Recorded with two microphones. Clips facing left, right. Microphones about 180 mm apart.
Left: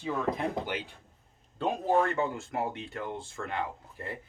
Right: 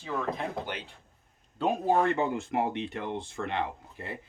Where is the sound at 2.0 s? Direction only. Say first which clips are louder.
Right 1 dB; 15° right (ahead or behind).